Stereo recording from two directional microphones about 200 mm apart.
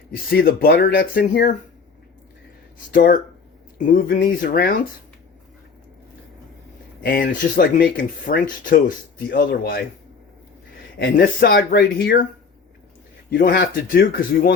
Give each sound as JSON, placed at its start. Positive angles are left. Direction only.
{"t": 0.3, "sound": "speech", "side_deg": 50}
{"t": 2.9, "sound": "speech", "side_deg": 45}
{"t": 7.0, "sound": "speech", "side_deg": 45}
{"t": 11.0, "sound": "speech", "side_deg": 45}
{"t": 13.3, "sound": "speech", "side_deg": 50}